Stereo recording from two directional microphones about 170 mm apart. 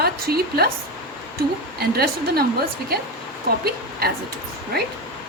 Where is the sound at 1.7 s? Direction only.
65° right (ahead or behind).